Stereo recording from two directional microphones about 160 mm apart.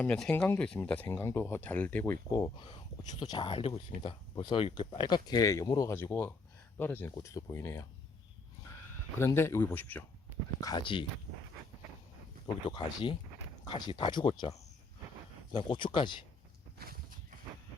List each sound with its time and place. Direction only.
0.0 s speech: 10° left (ahead or behind)
2.3 s speech: 25° left (ahead or behind)
9.1 s speech: 15° left (ahead or behind)
10.6 s speech: 25° left (ahead or behind)
12.6 s speech: 30° left (ahead or behind)
15.5 s speech: 30° left (ahead or behind)
16.7 s walk: 70° right (ahead or behind)